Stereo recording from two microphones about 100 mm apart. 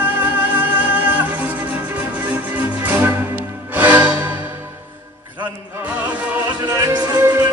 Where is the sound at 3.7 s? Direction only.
15° right (ahead or behind).